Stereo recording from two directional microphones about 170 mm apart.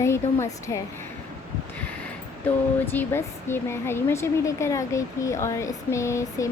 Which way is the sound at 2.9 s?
15° left (ahead or behind).